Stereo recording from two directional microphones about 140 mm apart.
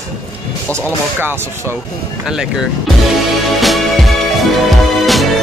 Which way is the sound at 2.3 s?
5° right (ahead or behind).